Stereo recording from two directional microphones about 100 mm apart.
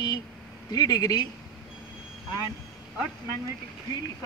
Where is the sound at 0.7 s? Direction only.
40° left (ahead or behind).